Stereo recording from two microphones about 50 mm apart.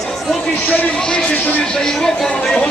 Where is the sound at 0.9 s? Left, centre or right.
Centre.